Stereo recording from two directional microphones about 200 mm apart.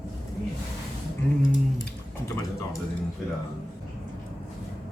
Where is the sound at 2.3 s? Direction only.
15° left (ahead or behind).